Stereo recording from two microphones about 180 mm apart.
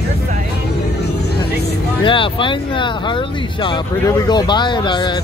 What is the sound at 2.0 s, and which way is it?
Speech, 30° left (ahead or behind).